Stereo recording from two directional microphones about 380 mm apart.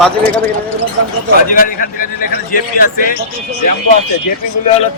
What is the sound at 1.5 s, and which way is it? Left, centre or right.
A man's voice, left.